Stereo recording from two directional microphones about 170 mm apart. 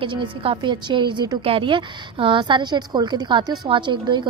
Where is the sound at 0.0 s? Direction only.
30° right (ahead or behind).